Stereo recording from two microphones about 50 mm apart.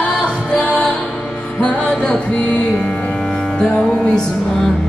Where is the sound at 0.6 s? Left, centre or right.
Left.